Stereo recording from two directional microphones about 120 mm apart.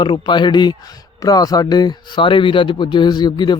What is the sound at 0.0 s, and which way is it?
A man's voice, 40° left (ahead or behind).